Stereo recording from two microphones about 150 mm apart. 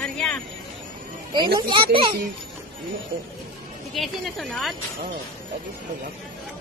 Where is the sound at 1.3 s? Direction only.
30° right (ahead or behind).